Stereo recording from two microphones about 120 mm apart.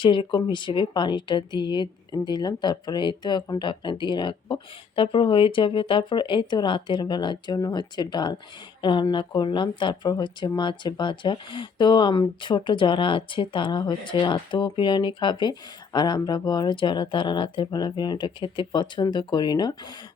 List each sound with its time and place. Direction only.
0.0 s speech: 45° left (ahead or behind)